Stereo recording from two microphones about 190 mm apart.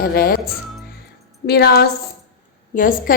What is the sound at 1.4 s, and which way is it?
Speech, 55° left (ahead or behind).